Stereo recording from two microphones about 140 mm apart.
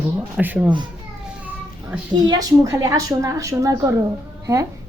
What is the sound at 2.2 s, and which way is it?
A woman's voice, 25° right (ahead or behind).